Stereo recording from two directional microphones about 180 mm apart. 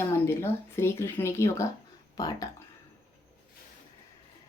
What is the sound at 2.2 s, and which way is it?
Music, 20° left (ahead or behind).